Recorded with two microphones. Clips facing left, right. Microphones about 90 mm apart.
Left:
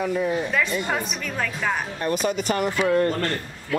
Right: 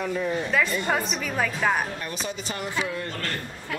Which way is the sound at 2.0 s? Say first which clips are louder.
Left 9 dB; 50° left (ahead or behind).